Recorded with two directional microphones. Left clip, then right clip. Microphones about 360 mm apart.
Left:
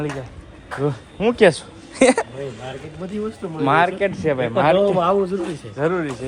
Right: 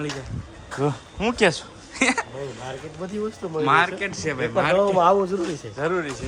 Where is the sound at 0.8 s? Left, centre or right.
Centre.